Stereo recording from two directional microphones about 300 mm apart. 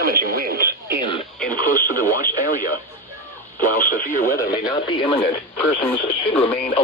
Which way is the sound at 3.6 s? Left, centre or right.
Left.